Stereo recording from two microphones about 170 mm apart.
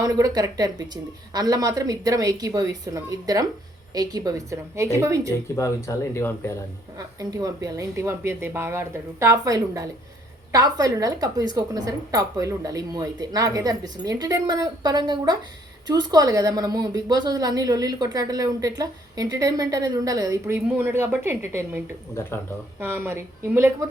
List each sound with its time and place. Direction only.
0.0 s a woman's voice: 20° right (ahead or behind)
5.5 s speech: 15° left (ahead or behind)
6.9 s a woman's voice: 20° right (ahead or behind)
22.1 s speech: 15° left (ahead or behind)
22.8 s speech: 15° right (ahead or behind)